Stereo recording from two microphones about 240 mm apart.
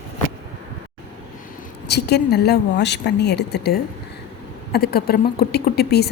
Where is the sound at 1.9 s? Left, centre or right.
Left.